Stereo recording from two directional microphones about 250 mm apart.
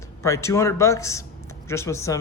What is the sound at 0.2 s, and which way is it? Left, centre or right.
Speech, centre.